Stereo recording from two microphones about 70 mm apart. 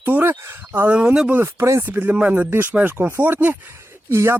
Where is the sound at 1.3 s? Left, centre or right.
Right.